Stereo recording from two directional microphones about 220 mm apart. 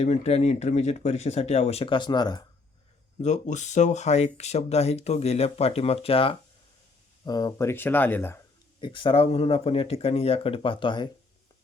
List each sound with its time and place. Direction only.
0.0 s speech: 30° left (ahead or behind)
3.2 s speech: 30° left (ahead or behind); by 8.4 s 10° left (ahead or behind)
8.8 s speech: 20° left (ahead or behind)